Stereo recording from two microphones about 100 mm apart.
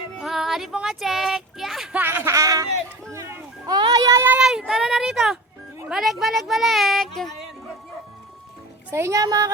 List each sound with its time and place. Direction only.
0.2 s child singing: 5° right (ahead or behind)
1.9 s a sound: 20° right (ahead or behind)
3.1 s children playing: 30° right (ahead or behind)
3.7 s a sound: 45° right (ahead or behind)
4.1 s speech: 25° right (ahead or behind)
4.4 s speech: 5° right (ahead or behind)
8.9 s speech: 25° right (ahead or behind)
9.2 s a woman's voice: 35° right (ahead or behind)